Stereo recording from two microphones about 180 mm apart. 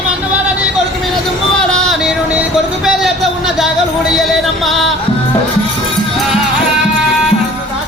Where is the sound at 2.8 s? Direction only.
Centre (ahead or behind).